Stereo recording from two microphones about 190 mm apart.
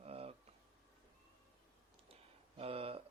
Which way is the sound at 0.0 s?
30° right (ahead or behind).